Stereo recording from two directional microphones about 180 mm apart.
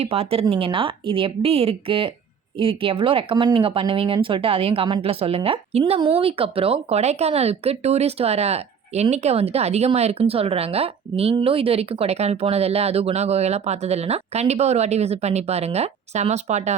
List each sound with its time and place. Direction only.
0.0 s speech: 35° right (ahead or behind)